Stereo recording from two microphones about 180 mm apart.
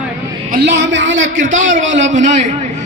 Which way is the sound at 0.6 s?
75° right (ahead or behind).